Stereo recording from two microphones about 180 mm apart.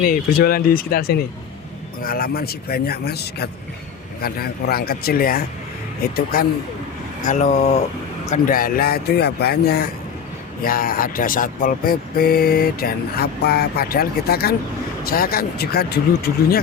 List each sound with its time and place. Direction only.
0.0 s speech: 55° left (ahead or behind)
7.3 s speech: 45° left (ahead or behind); by 16.6 s 60° left (ahead or behind)